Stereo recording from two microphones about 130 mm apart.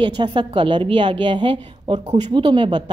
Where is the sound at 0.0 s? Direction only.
35° right (ahead or behind).